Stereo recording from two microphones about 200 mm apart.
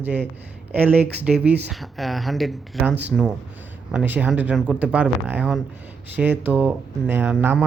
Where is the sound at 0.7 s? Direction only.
10° right (ahead or behind).